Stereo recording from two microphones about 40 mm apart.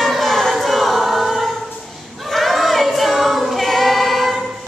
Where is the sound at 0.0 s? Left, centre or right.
Centre.